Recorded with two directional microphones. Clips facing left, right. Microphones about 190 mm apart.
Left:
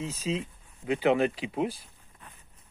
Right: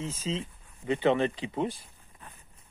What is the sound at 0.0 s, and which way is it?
Speech, 10° left (ahead or behind).